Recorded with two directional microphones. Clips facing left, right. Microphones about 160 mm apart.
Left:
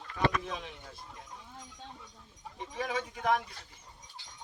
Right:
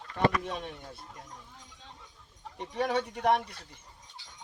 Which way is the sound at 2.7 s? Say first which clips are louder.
Right 6 dB; 65° right (ahead or behind).